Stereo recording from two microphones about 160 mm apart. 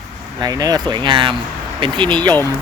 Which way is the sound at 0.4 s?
25° right (ahead or behind).